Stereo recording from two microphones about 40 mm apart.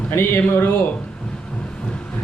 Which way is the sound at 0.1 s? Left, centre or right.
Left.